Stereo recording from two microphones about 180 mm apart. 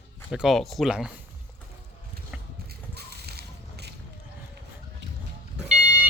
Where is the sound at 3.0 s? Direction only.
60° right (ahead or behind).